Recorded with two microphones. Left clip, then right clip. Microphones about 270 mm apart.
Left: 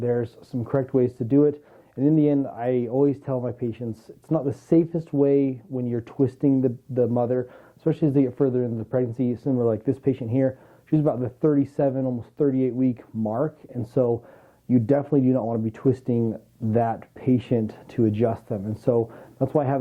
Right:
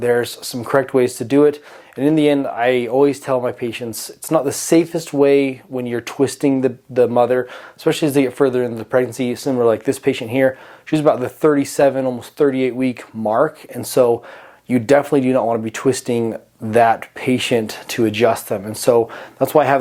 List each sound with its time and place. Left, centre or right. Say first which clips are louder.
0.0 s speech: right 8 dB; centre